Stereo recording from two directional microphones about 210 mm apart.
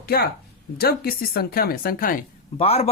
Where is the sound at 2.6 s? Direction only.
30° left (ahead or behind).